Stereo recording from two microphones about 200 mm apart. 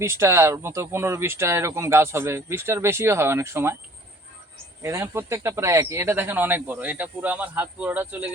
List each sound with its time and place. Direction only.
0.0 s speech: 15° right (ahead or behind)
4.8 s speech: 15° right (ahead or behind)